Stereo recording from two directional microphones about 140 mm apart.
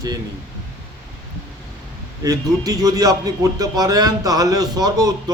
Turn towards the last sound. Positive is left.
turn(degrees=-25)  # may be behind; listen again after turning